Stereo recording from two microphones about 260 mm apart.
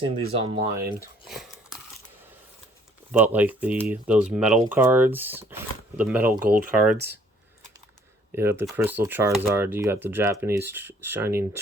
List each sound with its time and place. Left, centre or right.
0.0 s speech: right
1.3 s a sound: centre
3.1 s speech: centre
8.4 s speech: centre